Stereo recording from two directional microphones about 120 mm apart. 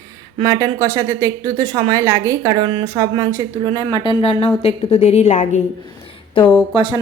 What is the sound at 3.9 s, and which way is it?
Speech, 40° left (ahead or behind).